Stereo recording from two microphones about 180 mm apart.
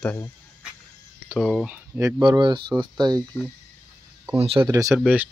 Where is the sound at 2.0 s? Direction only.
20° right (ahead or behind).